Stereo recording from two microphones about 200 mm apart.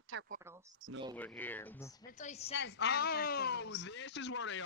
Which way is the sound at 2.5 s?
60° left (ahead or behind).